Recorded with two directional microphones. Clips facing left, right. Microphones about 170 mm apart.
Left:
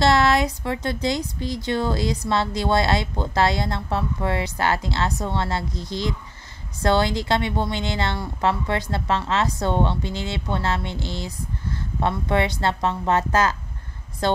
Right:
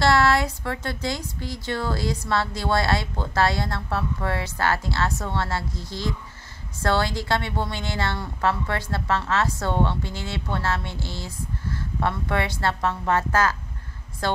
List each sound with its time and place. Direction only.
0.0 s a woman's voice: 20° left (ahead or behind)